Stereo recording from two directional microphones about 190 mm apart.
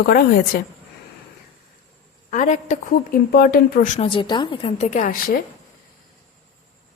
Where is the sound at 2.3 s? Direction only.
40° left (ahead or behind).